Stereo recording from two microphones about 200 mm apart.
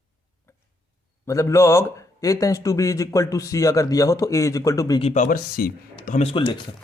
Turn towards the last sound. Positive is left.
turn(degrees=25)  # may be behind; listen again after turning